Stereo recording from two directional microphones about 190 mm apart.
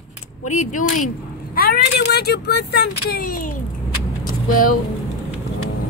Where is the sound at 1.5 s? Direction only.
55° left (ahead or behind).